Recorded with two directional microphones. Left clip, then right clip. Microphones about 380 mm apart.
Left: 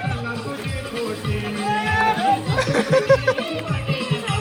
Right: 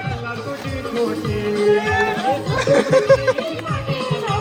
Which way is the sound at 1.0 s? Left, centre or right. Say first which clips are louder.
Right 5 dB; right.